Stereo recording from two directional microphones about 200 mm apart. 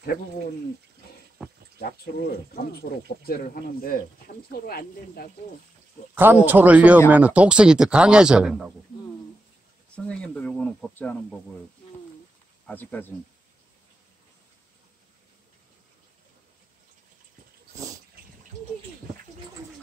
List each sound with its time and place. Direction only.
1.8 s speech: 50° left (ahead or behind)
6.1 s a man's voice: 10° right (ahead or behind)
9.9 s speech: 5° left (ahead or behind)
12.6 s speech: 10° left (ahead or behind)